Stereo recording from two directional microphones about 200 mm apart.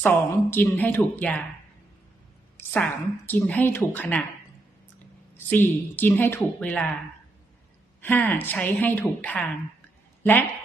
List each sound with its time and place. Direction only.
0.0 s a woman's voice: 10° left (ahead or behind)
2.6 s a woman's voice: 10° left (ahead or behind)
5.5 s a woman's voice: 10° left (ahead or behind)
8.0 s a woman's voice: 10° left (ahead or behind)